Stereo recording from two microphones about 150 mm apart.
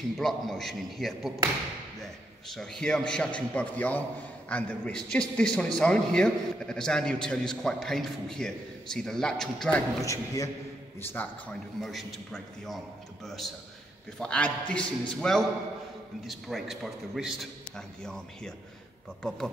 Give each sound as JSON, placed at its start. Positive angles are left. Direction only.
{"t": 0.2, "sound": "a man's voice", "side_deg": 0}
{"t": 2.4, "sound": "a man's voice", "side_deg": 0}
{"t": 10.0, "sound": "a man's voice", "side_deg": 20}
{"t": 11.0, "sound": "a man's voice", "side_deg": 10}
{"t": 11.8, "sound": "a man's voice", "side_deg": 0}